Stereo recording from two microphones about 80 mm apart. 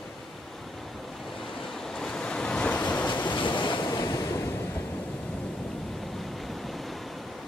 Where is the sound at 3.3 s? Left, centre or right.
Left.